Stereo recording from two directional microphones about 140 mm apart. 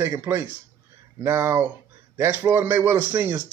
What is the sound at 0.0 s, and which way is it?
A man's voice, 20° right (ahead or behind).